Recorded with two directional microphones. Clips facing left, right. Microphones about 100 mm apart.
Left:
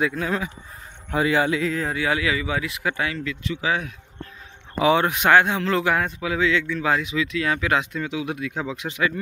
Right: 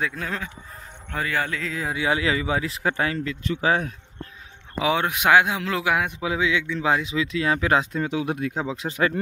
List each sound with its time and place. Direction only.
0.0 s speech: 5° left (ahead or behind)
1.1 s speech: 15° left (ahead or behind)
1.7 s speech: 10° right (ahead or behind)
2.0 s speech: 25° right (ahead or behind); by 3.9 s 40° right (ahead or behind)
4.7 s speech: centre (ahead or behind)
6.1 s a man's voice: 20° right (ahead or behind); by 9.1 s 40° right (ahead or behind)